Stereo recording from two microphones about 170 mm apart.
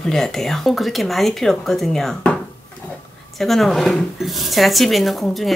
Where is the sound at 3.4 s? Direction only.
Centre (ahead or behind).